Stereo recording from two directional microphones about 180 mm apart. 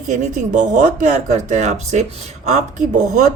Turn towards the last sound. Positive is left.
turn(degrees=-40)  # may be behind; listen again after turning